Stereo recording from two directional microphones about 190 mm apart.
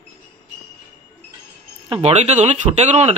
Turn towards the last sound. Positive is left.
turn(degrees=-35)  # may be behind; listen again after turning